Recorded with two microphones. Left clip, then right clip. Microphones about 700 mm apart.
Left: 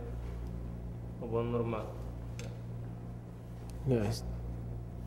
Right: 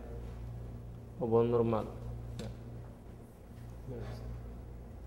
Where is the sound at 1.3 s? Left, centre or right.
Right.